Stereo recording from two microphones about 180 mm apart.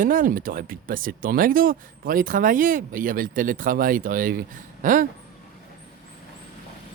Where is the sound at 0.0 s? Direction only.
50° right (ahead or behind).